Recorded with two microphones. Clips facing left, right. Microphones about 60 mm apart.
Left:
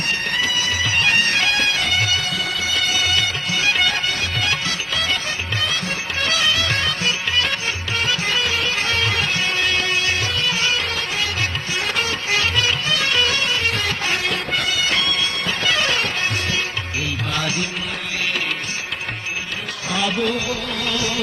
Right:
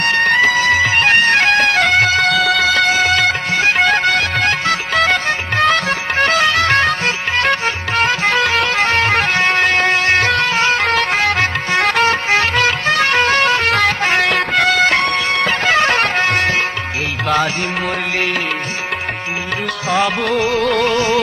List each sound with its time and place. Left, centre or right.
0.0 s music: right
2.8 s music: right
3.6 s bagpipes: right
3.8 s music: right
6.2 s music: right
15.6 s music: right
19.9 s music: right
20.9 s music: right